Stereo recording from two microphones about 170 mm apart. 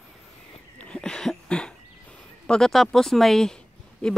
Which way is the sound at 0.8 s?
5° left (ahead or behind).